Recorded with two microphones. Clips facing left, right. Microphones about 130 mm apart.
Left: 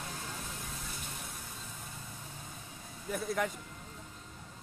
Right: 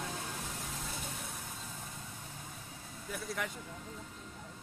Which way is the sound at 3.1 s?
50° left (ahead or behind).